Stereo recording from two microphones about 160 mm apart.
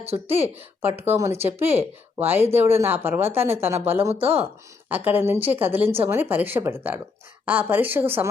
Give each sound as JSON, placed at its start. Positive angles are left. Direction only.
{"t": 0.0, "sound": "speech", "side_deg": -40}
{"t": 0.8, "sound": "a woman's voice", "side_deg": -15}
{"t": 4.1, "sound": "speech", "side_deg": -35}
{"t": 4.9, "sound": "a woman's voice", "side_deg": -10}